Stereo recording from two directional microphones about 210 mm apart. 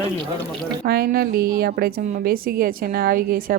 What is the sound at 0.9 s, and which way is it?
A woman's voice, 45° right (ahead or behind).